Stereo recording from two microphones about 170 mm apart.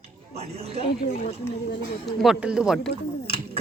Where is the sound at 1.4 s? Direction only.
15° left (ahead or behind).